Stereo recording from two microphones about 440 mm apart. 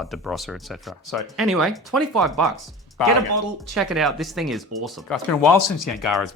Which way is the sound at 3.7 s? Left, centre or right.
Centre.